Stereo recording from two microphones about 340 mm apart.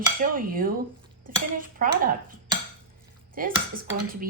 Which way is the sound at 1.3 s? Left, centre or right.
Right.